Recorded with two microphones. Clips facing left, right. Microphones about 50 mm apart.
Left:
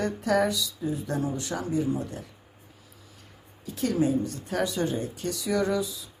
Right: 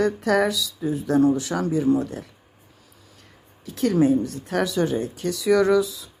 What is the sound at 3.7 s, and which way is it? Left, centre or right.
Speech, right.